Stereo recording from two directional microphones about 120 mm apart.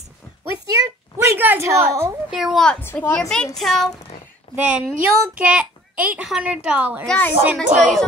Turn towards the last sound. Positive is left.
turn(degrees=-90)